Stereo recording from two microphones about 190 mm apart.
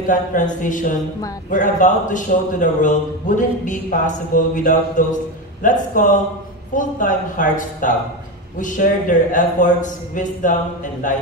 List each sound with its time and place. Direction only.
0.0 s a man's voice: 45° left (ahead or behind)